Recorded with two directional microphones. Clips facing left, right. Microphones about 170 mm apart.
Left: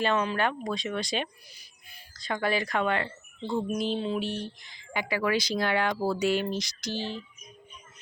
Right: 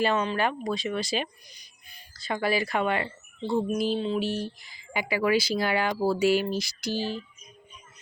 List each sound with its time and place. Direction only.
0.0 s speech: centre (ahead or behind)
1.5 s music: 5° left (ahead or behind)
2.1 s speech: 5° right (ahead or behind)